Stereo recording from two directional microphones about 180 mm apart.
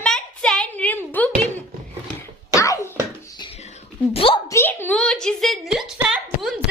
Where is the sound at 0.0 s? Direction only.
5° left (ahead or behind).